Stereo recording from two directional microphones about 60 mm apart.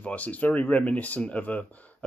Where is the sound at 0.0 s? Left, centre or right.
Left.